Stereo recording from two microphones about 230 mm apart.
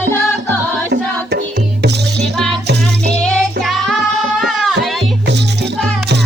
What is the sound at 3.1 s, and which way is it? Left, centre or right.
Music, centre.